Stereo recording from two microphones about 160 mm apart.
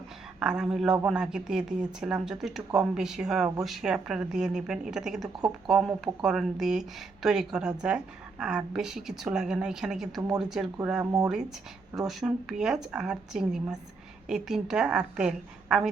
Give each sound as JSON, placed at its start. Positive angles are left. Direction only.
{"t": 0.3, "sound": "speech", "side_deg": -5}
{"t": 11.0, "sound": "speech", "side_deg": -20}
{"t": 11.9, "sound": "speech", "side_deg": 0}